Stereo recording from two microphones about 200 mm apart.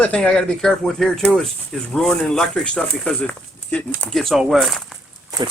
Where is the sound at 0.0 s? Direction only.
5° left (ahead or behind).